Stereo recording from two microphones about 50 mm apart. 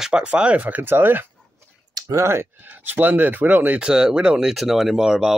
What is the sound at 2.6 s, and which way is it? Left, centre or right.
Speech, right.